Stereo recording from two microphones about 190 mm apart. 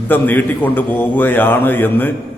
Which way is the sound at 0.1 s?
10° left (ahead or behind).